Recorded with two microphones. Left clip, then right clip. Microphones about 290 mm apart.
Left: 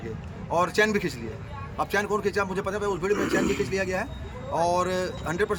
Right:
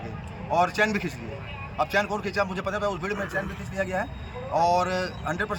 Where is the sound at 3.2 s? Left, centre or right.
Left.